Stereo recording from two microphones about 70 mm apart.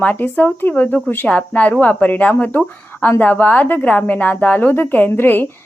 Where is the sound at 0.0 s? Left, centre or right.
Left.